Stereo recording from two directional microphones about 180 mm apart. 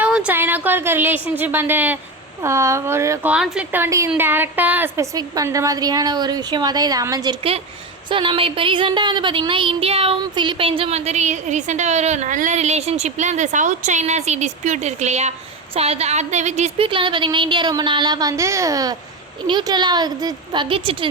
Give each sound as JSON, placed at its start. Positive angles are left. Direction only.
{"t": 0.0, "sound": "a woman's voice", "side_deg": -5}
{"t": 3.3, "sound": "a woman's voice", "side_deg": -5}
{"t": 8.1, "sound": "child singing", "side_deg": -30}
{"t": 15.7, "sound": "a woman's voice", "side_deg": -35}